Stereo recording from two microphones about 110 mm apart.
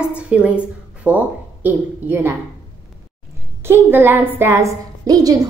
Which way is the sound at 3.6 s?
20° right (ahead or behind).